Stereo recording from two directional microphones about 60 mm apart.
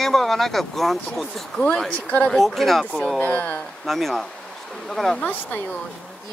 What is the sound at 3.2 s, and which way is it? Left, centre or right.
Speech, left.